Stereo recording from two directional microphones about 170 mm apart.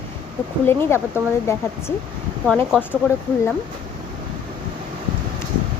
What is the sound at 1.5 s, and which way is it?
Speech, 15° left (ahead or behind).